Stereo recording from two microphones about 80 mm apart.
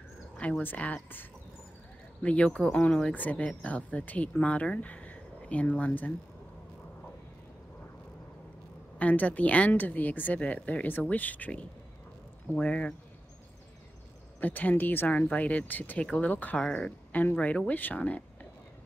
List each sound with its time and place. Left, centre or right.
0.4 s speech: centre
2.2 s speech: centre
8.9 s speech: centre
14.4 s speech: left